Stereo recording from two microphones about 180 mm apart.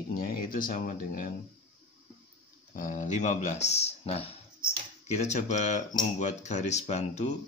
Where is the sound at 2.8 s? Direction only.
45° left (ahead or behind).